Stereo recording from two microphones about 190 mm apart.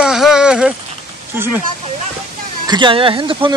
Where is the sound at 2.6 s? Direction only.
25° right (ahead or behind).